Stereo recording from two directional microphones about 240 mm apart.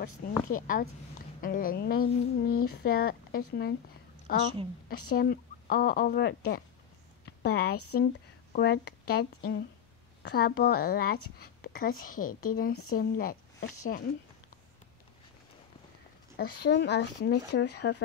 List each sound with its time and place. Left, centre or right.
0.5 s speech: left
7.2 s a sound: left
7.9 s speech: left
11.6 s a sound: left
12.0 s speech: left
16.3 s speech: left